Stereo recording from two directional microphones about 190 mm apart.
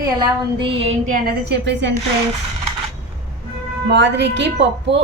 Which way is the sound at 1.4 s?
60° right (ahead or behind).